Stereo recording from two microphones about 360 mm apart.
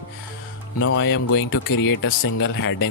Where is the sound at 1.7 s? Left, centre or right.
Left.